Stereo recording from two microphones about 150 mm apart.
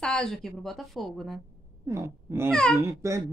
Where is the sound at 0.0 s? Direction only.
5° left (ahead or behind).